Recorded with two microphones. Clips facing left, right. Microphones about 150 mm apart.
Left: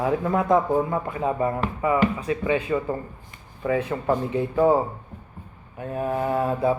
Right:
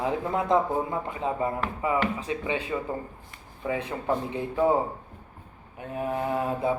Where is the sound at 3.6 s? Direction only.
20° right (ahead or behind).